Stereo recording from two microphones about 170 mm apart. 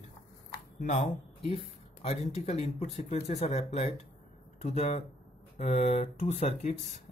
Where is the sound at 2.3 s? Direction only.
40° left (ahead or behind).